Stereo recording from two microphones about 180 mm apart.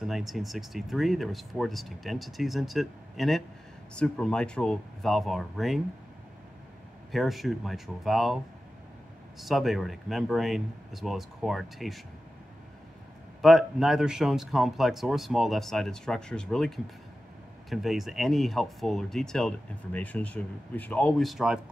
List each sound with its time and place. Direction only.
0.0 s speech: centre (ahead or behind)
7.1 s speech: centre (ahead or behind)
9.4 s speech: centre (ahead or behind)
13.4 s speech: centre (ahead or behind)